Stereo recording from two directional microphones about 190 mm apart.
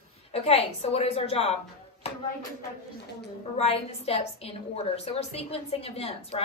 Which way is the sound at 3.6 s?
35° left (ahead or behind).